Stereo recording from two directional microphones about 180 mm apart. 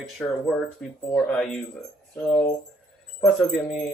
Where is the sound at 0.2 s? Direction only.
5° left (ahead or behind).